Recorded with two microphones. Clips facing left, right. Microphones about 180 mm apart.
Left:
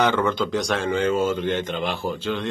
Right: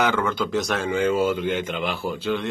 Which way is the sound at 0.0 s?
5° right (ahead or behind).